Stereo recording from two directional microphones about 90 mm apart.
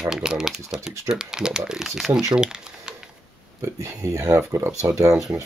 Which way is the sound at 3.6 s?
35° right (ahead or behind).